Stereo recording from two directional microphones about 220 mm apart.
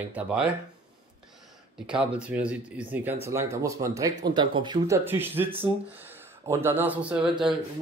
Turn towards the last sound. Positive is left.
turn(degrees=-20)  # may be behind; listen again after turning